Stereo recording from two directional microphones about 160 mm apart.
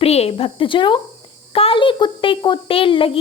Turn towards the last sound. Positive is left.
turn(degrees=35)  # may be behind; listen again after turning